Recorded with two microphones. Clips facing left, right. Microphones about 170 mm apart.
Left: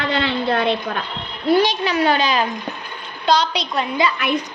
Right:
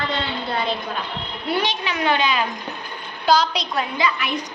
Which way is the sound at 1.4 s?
40° left (ahead or behind).